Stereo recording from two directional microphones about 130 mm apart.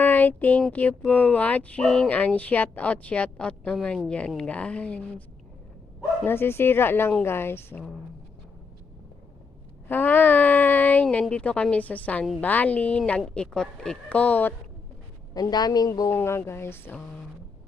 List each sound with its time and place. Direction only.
0.0 s a sound: 15° left (ahead or behind)
0.7 s speech: 10° left (ahead or behind)
6.2 s speech: 15° left (ahead or behind)
9.9 s speech: 15° left (ahead or behind)
15.4 s a woman's voice: 30° left (ahead or behind)